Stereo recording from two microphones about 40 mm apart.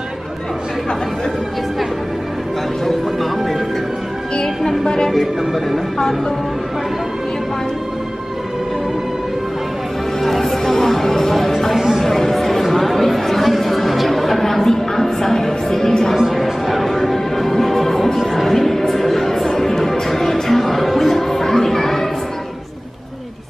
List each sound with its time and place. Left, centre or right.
2.8 s music: centre
4.4 s music: centre
5.1 s speech: centre
10.2 s music: centre
12.0 s chatter: centre
16.2 s music: centre